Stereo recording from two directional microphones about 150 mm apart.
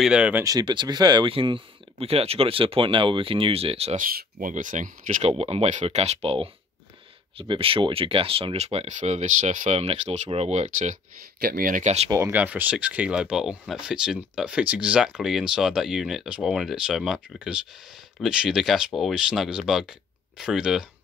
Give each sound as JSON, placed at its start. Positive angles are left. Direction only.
{"t": 0.0, "sound": "speech", "side_deg": -5}
{"t": 0.4, "sound": "speech", "side_deg": -25}
{"t": 3.9, "sound": "speech", "side_deg": -75}
{"t": 5.3, "sound": "speech", "side_deg": -40}
{"t": 11.4, "sound": "speech", "side_deg": -70}
{"t": 12.1, "sound": "speech", "side_deg": -15}